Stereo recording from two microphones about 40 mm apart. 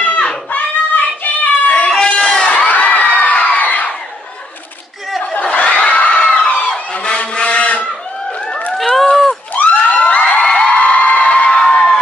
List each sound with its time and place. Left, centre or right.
0.0 s a sound: left
0.5 s child singing: left
1.9 s goat: left
2.6 s crowd: left
5.4 s crowd: left
6.9 s a sound: left
8.7 s run: centre
9.5 s crowd: left
10.4 s music: left
10.8 s music: left
11.6 s music: centre